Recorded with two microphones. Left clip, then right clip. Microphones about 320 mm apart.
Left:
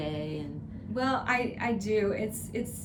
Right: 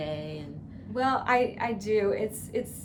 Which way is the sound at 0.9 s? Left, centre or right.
Centre.